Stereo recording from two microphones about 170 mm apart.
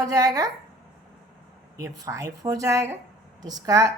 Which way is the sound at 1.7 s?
20° right (ahead or behind).